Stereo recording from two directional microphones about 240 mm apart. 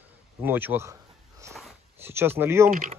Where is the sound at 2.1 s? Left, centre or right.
Centre.